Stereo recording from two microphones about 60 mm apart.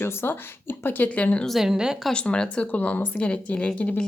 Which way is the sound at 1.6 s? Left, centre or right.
Centre.